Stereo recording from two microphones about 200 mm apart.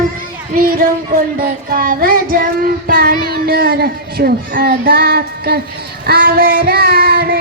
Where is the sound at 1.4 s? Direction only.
45° right (ahead or behind).